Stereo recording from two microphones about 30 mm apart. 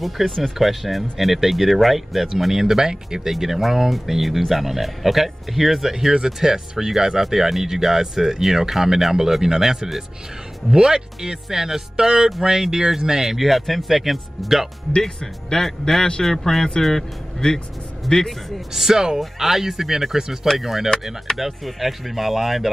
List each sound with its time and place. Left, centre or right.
0.0 s speech: centre; by 3.2 s right
3.3 s speech: centre
5.9 s speech: centre
13.4 s speech: centre
15.0 s speech: centre
18.7 s speech: centre